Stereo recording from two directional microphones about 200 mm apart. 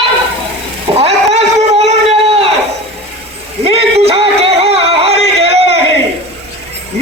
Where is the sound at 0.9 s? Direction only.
35° right (ahead or behind).